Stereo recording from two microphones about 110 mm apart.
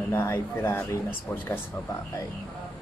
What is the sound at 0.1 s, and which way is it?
Speech, 20° left (ahead or behind).